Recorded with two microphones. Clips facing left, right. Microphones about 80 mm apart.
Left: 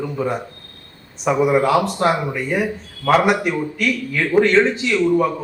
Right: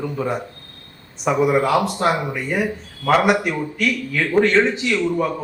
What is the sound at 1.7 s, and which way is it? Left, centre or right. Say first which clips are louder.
Speech: left 1 dB; centre.